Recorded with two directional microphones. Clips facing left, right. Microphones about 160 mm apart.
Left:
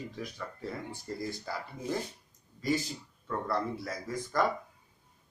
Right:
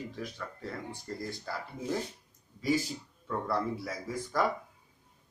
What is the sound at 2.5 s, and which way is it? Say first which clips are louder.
Speech: right 1 dB; 10° right (ahead or behind).